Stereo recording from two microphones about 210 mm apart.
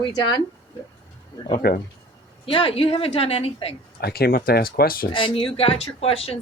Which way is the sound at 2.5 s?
25° left (ahead or behind).